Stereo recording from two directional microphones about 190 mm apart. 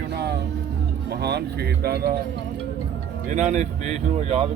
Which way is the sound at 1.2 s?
60° right (ahead or behind).